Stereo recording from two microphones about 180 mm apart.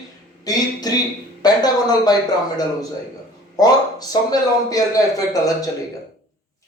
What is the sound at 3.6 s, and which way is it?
Speech, 20° left (ahead or behind).